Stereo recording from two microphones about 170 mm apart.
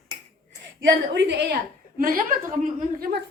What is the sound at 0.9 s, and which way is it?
Speech, 85° right.